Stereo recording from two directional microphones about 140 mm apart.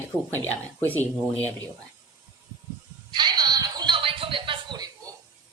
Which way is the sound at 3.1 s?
30° right (ahead or behind).